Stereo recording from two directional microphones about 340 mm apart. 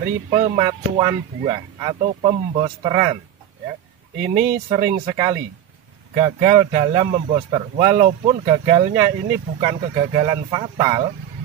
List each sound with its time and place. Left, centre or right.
0.3 s speech: centre
4.4 s speech: centre